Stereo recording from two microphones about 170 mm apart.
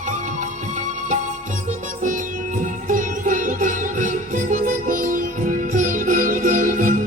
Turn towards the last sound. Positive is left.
turn(degrees=-50)  # may be behind; listen again after turning